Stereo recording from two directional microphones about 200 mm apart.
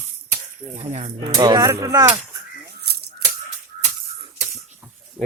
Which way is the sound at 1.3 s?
15° right (ahead or behind).